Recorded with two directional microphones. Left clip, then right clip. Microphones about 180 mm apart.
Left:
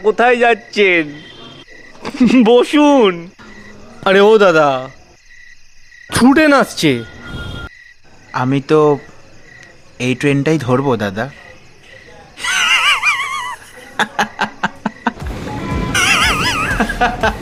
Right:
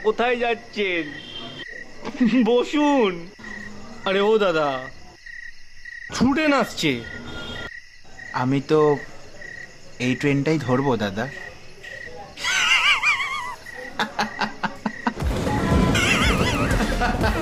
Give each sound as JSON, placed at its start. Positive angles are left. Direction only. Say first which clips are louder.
{"t": 0.0, "sound": "speech", "louder": "left 10 dB", "side_deg": 30}
{"t": 2.0, "sound": "speech", "louder": "left 9 dB", "side_deg": 30}
{"t": 6.1, "sound": "speech", "louder": "left 10 dB", "side_deg": 45}
{"t": 8.3, "sound": "speech", "louder": "left 7 dB", "side_deg": 30}
{"t": 10.0, "sound": "speech", "louder": "left 7 dB", "side_deg": 30}
{"t": 12.4, "sound": "laughter", "louder": "left 6 dB", "side_deg": 30}
{"t": 15.9, "sound": "music", "louder": "left 10 dB", "side_deg": 40}